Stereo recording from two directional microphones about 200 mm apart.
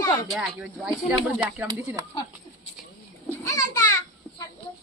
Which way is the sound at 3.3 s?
15° left (ahead or behind).